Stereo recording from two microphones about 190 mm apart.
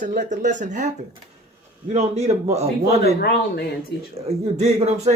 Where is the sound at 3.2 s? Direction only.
60° left (ahead or behind).